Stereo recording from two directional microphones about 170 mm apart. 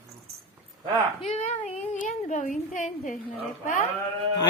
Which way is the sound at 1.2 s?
35° left (ahead or behind).